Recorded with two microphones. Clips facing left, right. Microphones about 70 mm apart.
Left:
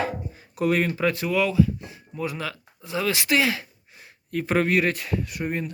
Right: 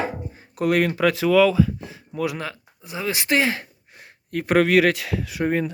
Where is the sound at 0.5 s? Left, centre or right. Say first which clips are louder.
Right 3 dB; right.